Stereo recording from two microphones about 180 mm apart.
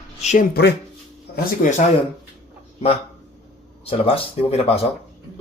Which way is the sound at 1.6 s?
50° left (ahead or behind).